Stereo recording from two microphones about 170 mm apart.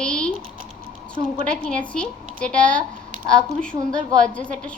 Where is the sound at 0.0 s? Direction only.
5° left (ahead or behind).